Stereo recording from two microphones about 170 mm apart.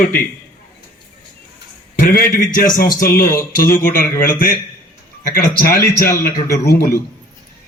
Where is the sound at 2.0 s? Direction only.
55° left (ahead or behind).